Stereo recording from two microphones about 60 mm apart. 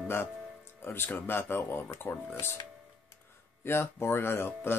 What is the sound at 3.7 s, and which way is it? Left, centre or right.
Speech, left.